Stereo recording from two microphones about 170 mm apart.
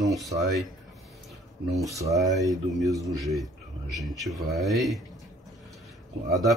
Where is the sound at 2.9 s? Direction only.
20° right (ahead or behind).